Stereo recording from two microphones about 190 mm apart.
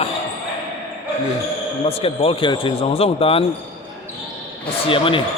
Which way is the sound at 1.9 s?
30° left (ahead or behind).